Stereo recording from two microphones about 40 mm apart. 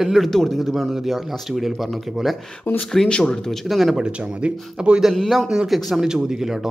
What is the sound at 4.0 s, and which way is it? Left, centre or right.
Speech, right.